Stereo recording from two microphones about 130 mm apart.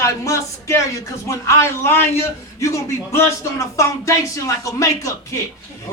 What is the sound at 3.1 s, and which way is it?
Speech, 20° left (ahead or behind).